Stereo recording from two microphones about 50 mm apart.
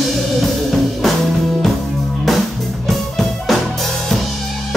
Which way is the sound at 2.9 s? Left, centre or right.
Centre.